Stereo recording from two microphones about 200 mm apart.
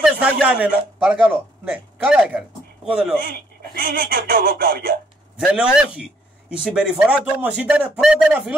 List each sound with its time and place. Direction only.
0.0 s a man's voice: 5° right (ahead or behind)
3.3 s speech: 45° right (ahead or behind)
5.4 s speech: 5° right (ahead or behind)